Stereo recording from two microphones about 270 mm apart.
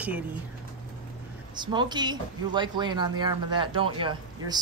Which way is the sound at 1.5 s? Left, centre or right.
Centre.